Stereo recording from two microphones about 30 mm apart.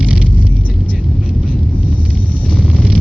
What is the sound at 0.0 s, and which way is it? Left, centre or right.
Vehicle, centre.